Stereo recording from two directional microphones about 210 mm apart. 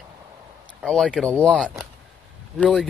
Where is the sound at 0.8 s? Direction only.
Centre (ahead or behind).